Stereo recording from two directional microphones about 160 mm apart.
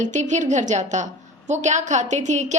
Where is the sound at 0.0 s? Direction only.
50° right (ahead or behind).